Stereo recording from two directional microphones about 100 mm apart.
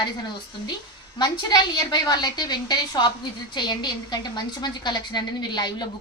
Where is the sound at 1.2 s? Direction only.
45° left (ahead or behind).